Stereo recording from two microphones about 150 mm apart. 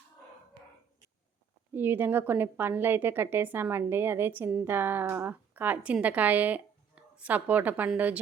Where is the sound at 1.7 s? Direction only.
15° right (ahead or behind).